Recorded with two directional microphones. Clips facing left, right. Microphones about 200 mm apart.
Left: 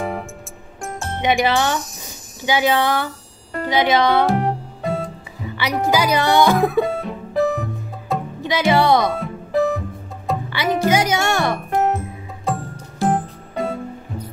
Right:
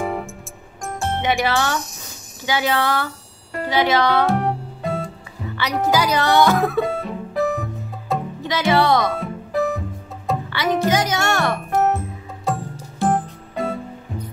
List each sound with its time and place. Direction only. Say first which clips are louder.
0.9 s speech: left 1 dB; 15° left (ahead or behind)
1.8 s jingle bell: left 1 dB; centre (ahead or behind)
2.4 s speech: left 3 dB; 15° left (ahead or behind)
4.3 s music: left 1 dB; centre (ahead or behind)
5.6 s speech: left 1 dB; 10° left (ahead or behind)
6.8 s music: left 2 dB; centre (ahead or behind)
8.5 s speech: left 2 dB; 15° left (ahead or behind)
9.1 s music: left 2 dB; centre (ahead or behind)
10.5 s speech: left 1 dB; 10° left (ahead or behind)
12.5 s music: even; centre (ahead or behind)